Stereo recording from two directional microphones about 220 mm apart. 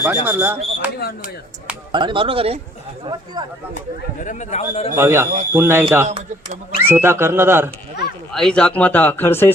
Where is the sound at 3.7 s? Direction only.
35° left (ahead or behind).